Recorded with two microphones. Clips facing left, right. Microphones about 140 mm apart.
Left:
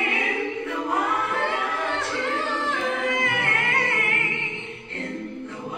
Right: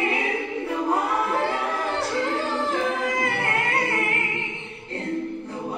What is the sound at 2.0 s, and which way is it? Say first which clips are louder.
Music: right 2 dB; 35° right (ahead or behind).